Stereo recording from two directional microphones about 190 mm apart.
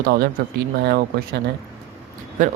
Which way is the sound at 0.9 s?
55° right (ahead or behind).